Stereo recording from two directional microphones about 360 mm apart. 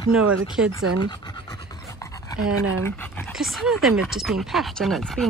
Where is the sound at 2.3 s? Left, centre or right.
Right.